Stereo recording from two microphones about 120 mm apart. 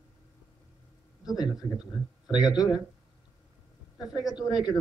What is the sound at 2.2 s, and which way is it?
Speech, 35° left (ahead or behind).